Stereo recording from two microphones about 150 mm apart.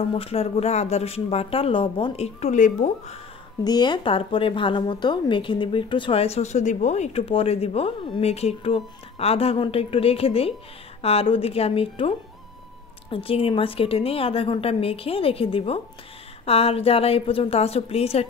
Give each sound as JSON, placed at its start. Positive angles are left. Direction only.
{"t": 0.1, "sound": "speech", "side_deg": 40}
{"t": 3.6, "sound": "a woman's voice", "side_deg": 30}
{"t": 13.1, "sound": "a woman's voice", "side_deg": 40}